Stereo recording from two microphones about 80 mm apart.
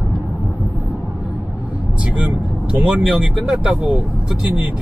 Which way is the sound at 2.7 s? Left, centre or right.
Centre.